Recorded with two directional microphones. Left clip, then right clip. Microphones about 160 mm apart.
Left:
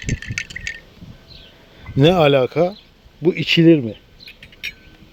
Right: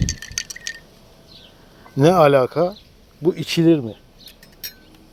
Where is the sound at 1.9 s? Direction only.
20° left (ahead or behind).